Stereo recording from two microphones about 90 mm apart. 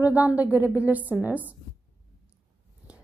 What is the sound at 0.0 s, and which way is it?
Speech, 15° right (ahead or behind).